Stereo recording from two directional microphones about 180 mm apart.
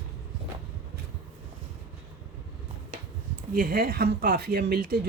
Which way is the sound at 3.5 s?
55° right (ahead or behind).